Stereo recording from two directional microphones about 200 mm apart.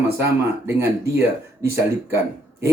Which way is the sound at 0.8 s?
15° right (ahead or behind).